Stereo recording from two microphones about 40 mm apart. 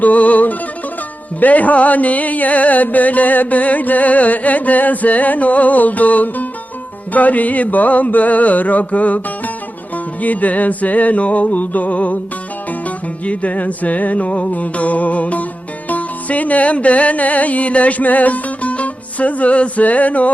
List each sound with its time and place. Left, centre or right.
0.0 s music: left
13.2 s music: left